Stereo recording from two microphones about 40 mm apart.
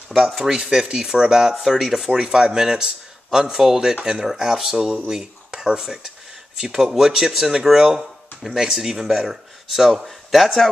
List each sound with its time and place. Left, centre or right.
0.4 s speech: centre
2.0 s speech: centre
4.3 s speech: centre
5.8 s a sound: centre
6.8 s speech: centre